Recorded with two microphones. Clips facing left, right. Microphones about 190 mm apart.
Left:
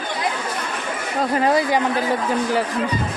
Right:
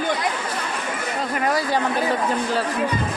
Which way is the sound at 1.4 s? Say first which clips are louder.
Left 3 dB; 20° left (ahead or behind).